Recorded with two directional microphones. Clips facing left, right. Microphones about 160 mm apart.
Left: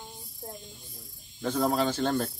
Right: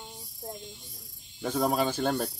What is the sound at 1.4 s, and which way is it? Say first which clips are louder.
Speech: left 1 dB; 5° right (ahead or behind).